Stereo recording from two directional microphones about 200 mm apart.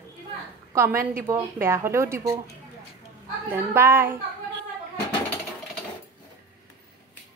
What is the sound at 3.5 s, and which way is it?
Speech, 10° right (ahead or behind).